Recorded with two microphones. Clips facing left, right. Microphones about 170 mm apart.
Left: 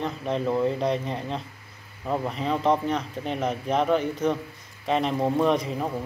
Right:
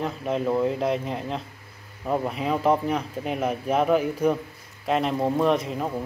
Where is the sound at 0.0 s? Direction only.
5° right (ahead or behind).